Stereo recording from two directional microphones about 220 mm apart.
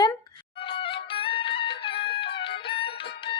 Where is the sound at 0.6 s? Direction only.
25° left (ahead or behind).